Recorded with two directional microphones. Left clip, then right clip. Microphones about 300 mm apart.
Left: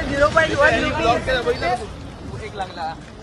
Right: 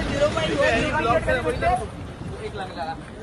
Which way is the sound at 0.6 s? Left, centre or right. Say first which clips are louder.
Left 4 dB; left.